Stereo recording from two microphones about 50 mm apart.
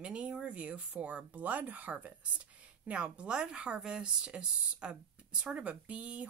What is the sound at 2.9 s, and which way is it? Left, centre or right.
Speech, right.